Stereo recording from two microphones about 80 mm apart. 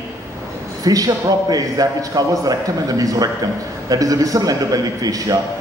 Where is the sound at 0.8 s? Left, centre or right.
Right.